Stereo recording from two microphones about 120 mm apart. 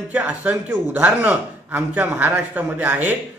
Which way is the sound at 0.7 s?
10° right (ahead or behind).